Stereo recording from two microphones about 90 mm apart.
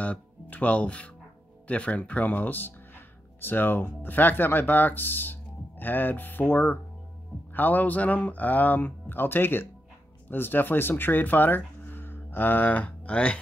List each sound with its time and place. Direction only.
0.0 s speech: 15° left (ahead or behind)